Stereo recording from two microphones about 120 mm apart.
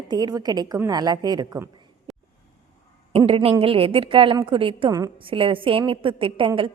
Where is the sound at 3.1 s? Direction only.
50° right (ahead or behind).